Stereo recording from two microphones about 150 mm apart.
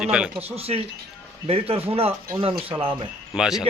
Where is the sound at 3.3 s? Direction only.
5° right (ahead or behind).